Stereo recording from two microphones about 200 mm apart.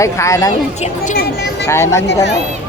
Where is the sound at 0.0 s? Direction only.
15° left (ahead or behind).